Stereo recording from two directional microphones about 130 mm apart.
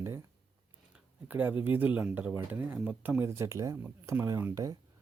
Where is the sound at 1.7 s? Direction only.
15° right (ahead or behind).